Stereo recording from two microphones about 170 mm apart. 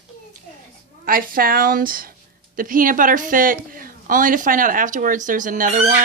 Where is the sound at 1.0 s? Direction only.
55° right (ahead or behind).